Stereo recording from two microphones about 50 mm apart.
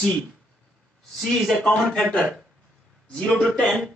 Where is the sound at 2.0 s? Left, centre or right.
Centre.